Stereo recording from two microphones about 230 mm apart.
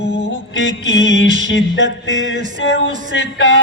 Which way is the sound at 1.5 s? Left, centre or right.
Left.